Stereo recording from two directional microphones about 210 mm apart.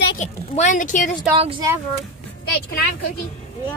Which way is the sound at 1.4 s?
25° right (ahead or behind).